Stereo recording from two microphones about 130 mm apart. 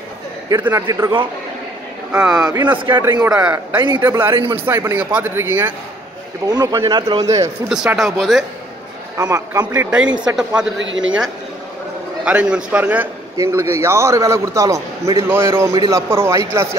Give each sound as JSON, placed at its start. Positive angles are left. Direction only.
{"t": 0.6, "sound": "speech", "side_deg": -15}
{"t": 0.8, "sound": "a man's voice", "side_deg": -25}
{"t": 2.1, "sound": "speech", "side_deg": -5}
{"t": 2.4, "sound": "a man's voice", "side_deg": -30}
{"t": 4.0, "sound": "speech", "side_deg": -15}
{"t": 4.3, "sound": "speech", "side_deg": -35}
{"t": 4.6, "sound": "a man's voice", "side_deg": -20}
{"t": 6.4, "sound": "a man's voice", "side_deg": -30}
{"t": 7.7, "sound": "speech", "side_deg": -5}
{"t": 9.1, "sound": "a man's voice", "side_deg": -25}
{"t": 9.8, "sound": "speech", "side_deg": -10}
{"t": 12.3, "sound": "a man's voice", "side_deg": -10}